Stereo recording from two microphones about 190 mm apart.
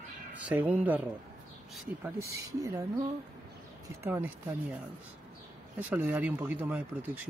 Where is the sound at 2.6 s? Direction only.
20° right (ahead or behind).